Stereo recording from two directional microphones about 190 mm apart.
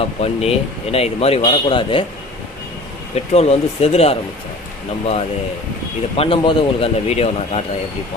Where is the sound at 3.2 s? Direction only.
35° left (ahead or behind).